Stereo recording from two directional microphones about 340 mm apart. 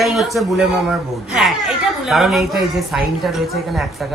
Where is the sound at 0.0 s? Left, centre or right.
Centre.